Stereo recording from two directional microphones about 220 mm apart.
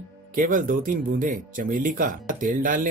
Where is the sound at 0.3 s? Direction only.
40° right (ahead or behind).